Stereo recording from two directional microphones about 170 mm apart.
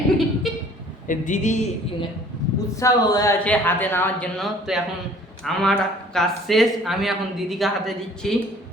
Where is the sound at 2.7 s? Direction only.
20° left (ahead or behind).